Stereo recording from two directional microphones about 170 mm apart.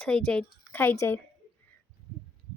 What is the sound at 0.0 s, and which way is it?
A woman's voice, 5° left (ahead or behind).